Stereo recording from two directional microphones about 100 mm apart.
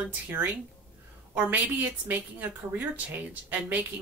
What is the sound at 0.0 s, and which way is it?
Speech, 20° right (ahead or behind).